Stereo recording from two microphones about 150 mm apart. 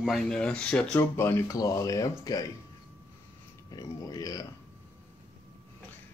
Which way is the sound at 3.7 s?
25° left (ahead or behind).